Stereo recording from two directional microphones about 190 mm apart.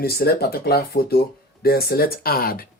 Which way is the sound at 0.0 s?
55° left (ahead or behind).